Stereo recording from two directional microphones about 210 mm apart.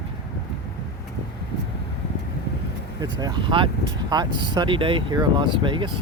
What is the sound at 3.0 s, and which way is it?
Speech, 20° right (ahead or behind).